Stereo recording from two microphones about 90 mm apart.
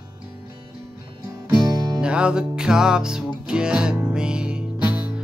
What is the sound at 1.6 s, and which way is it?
Music, 45° right (ahead or behind).